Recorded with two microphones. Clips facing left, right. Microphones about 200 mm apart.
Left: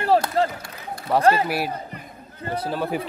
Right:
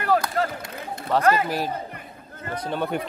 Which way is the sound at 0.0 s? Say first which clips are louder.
Left 3 dB; 30° left (ahead or behind).